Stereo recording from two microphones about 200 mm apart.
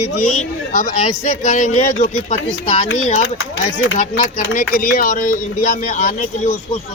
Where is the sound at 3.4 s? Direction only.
75° left (ahead or behind).